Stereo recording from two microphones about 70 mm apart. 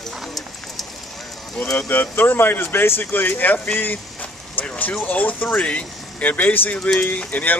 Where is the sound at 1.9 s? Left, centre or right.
Left.